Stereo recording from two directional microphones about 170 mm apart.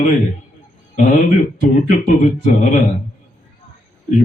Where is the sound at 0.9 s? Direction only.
50° left (ahead or behind).